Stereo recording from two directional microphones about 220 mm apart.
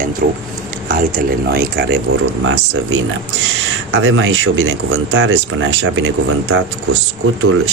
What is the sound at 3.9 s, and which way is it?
Speech, 60° right (ahead or behind).